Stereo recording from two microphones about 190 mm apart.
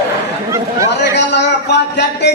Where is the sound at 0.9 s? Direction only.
65° left (ahead or behind).